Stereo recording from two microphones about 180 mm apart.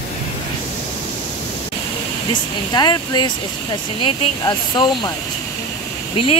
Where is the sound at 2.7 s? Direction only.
20° left (ahead or behind).